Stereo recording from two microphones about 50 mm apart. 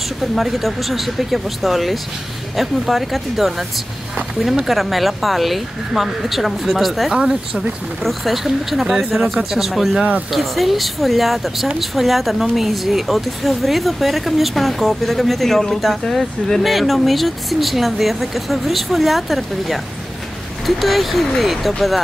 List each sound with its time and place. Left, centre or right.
0.2 s a woman's voice: centre
7.2 s speech: centre
8.0 s a woman's voice: centre